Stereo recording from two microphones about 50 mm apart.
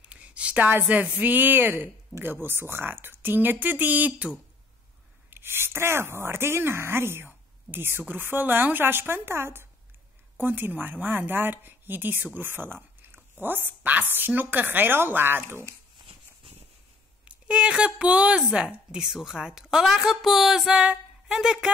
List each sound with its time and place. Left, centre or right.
0.0 s a sound: right
0.7 s speech: right
5.3 s a woman's voice: right
10.3 s a woman's voice: right
17.2 s a woman's voice: right